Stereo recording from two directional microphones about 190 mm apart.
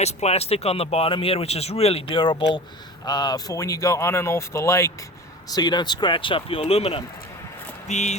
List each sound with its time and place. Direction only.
0.0 s speech: 35° left (ahead or behind)